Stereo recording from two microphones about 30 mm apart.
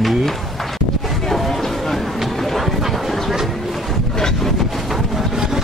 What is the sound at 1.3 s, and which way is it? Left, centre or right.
Music, centre.